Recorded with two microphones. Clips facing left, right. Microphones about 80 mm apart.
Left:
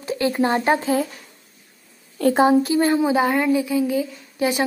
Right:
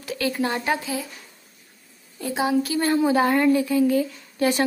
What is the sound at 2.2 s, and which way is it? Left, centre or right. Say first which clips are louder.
Speech: left 9 dB; left.